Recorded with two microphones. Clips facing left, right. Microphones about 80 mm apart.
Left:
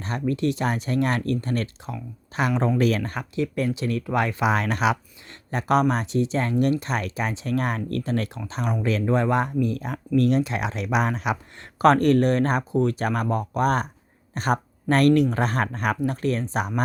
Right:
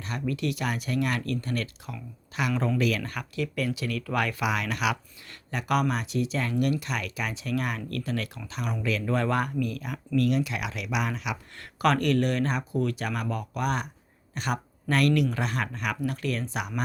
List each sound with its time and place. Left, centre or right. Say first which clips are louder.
0.0 s speech: left 5 dB; left
9.1 s speech: left 4 dB; left